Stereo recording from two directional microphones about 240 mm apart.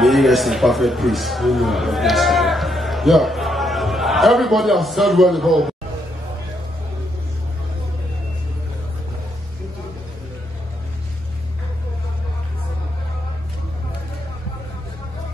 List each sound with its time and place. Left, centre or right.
0.0 s speech: centre